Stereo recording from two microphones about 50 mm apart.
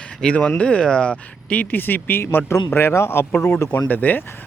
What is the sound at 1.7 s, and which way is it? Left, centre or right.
Speech, left.